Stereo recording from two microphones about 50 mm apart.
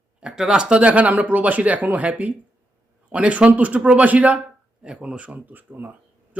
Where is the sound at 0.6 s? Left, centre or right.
Right.